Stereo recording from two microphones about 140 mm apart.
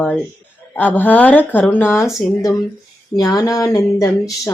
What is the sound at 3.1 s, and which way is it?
Speech, 25° left (ahead or behind).